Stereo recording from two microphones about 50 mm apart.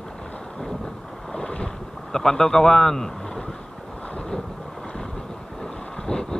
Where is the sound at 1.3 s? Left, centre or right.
Centre.